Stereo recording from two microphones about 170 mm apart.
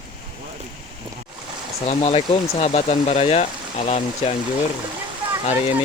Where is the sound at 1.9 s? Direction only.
35° left (ahead or behind).